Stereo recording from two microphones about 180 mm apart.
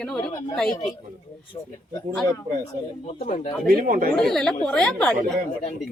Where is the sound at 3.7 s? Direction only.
50° right (ahead or behind).